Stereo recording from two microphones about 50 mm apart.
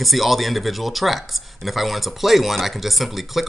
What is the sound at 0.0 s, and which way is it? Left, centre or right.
Speech, centre.